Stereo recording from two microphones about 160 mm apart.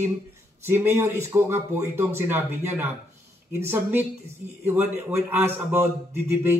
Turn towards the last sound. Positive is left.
turn(degrees=-15)  # may be behind; listen again after turning